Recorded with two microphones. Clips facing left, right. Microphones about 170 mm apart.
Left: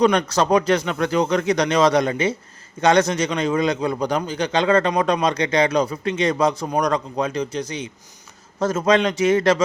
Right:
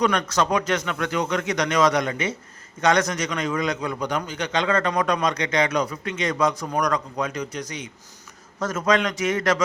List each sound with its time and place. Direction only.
0.0 s a man's voice: 30° left (ahead or behind)